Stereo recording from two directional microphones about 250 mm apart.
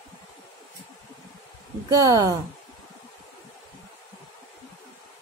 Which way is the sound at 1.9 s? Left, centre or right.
Centre.